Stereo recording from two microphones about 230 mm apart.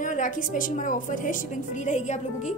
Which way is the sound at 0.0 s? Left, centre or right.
Left.